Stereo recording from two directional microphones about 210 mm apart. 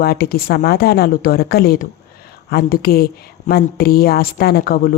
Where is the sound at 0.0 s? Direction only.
45° left (ahead or behind).